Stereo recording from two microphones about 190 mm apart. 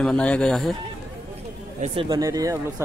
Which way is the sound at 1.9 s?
20° right (ahead or behind).